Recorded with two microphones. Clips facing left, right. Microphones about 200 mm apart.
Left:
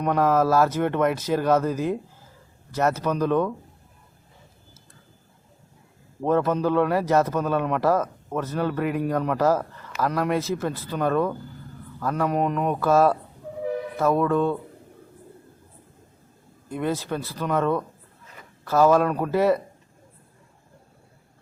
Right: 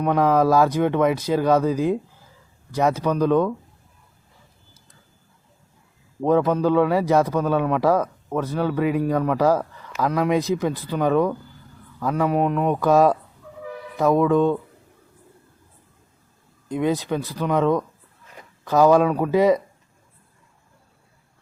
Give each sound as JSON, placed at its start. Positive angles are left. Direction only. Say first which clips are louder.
{"t": 0.0, "sound": "a man's voice", "louder": "right 2 dB", "side_deg": -10}
{"t": 6.2, "sound": "a man's voice", "louder": "right 3 dB", "side_deg": -15}
{"t": 16.6, "sound": "a man's voice", "louder": "right 4 dB", "side_deg": -15}